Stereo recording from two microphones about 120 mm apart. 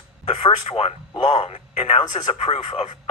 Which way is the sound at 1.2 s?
70° left (ahead or behind).